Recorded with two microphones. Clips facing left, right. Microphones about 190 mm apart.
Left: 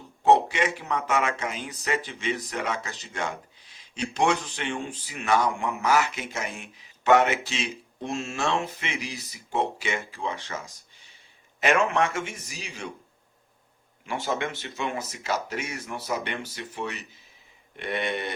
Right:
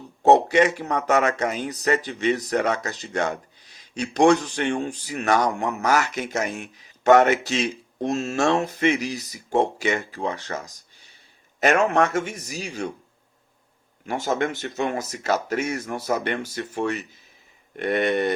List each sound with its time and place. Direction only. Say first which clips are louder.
0.2 s speech: right 5 dB; 45° right (ahead or behind)
11.6 s a man's voice: right 4 dB; 40° right (ahead or behind)
14.1 s speech: right 5 dB; 45° right (ahead or behind)